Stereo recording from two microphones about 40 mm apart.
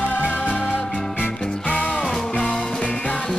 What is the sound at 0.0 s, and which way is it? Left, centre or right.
Music, left.